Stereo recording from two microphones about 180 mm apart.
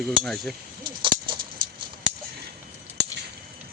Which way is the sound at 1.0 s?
25° right (ahead or behind).